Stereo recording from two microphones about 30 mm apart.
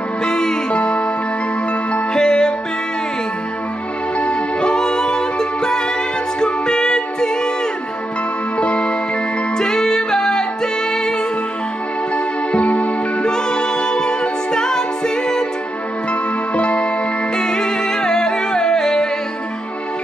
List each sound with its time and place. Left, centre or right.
0.2 s music: left
2.1 s music: left
4.2 s music: left
8.5 s music: left
9.6 s music: centre
12.5 s music: left
13.2 s a capella: left
16.1 s music: left
17.4 s music: left